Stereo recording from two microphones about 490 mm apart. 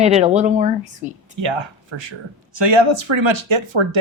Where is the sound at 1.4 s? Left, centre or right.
Right.